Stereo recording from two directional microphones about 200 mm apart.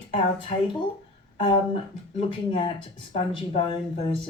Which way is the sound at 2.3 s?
25° left (ahead or behind).